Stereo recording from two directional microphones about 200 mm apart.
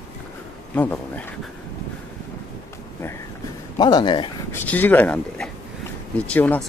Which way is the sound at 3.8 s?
20° left (ahead or behind).